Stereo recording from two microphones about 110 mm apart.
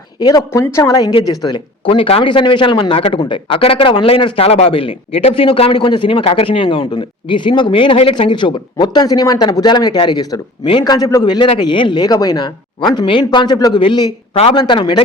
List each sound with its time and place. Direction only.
0.2 s speech: 40° left (ahead or behind)
0.5 s a woman's voice: 25° left (ahead or behind)
1.8 s a man's voice: 55° left (ahead or behind)
8.1 s a man's voice: 45° left (ahead or behind)